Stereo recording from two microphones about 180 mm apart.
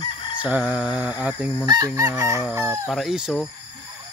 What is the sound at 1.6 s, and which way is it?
Chicken, 20° right (ahead or behind).